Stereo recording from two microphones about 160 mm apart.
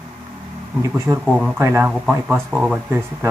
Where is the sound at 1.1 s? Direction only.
15° right (ahead or behind).